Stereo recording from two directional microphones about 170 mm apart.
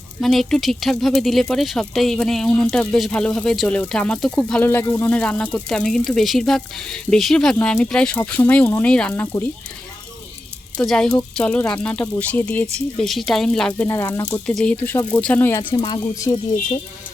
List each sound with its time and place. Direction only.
0.2 s speech: centre (ahead or behind)
10.8 s a woman's voice: 5° left (ahead or behind); by 14.4 s 20° left (ahead or behind)
14.4 s speech: 5° left (ahead or behind); by 16.4 s 25° left (ahead or behind)